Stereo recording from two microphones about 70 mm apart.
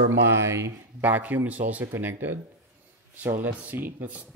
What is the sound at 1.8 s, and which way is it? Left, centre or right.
Speech, right.